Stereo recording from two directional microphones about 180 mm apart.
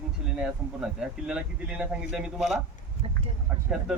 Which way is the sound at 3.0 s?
35° right (ahead or behind).